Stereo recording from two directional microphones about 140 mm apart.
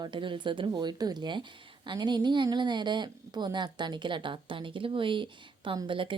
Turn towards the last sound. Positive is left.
turn(degrees=-35)  # may be behind; listen again after turning